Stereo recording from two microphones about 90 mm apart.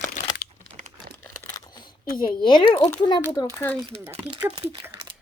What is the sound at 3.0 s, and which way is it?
Speech, 50° left (ahead or behind).